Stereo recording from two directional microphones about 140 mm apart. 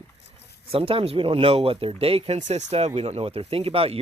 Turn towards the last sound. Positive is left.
turn(degrees=-45)  # may be behind; listen again after turning